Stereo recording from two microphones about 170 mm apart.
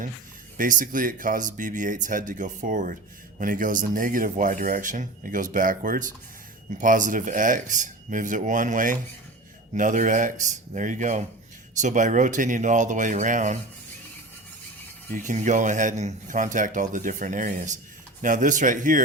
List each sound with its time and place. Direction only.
0.5 s speech: 50° right (ahead or behind)
15.1 s speech: 45° right (ahead or behind)